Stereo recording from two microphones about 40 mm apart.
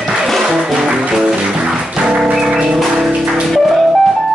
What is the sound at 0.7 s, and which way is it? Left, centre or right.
Music, centre.